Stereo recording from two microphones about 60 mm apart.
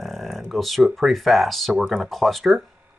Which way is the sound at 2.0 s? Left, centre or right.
Centre.